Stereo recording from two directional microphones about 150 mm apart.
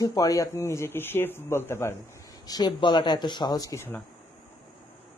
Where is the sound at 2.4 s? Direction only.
25° left (ahead or behind).